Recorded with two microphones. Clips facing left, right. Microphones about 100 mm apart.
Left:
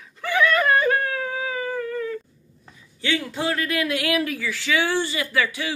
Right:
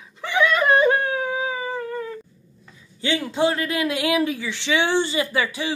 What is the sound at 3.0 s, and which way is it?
A man's voice, 25° right (ahead or behind).